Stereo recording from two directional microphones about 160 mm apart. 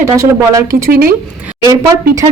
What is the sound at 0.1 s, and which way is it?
Speech, 20° right (ahead or behind).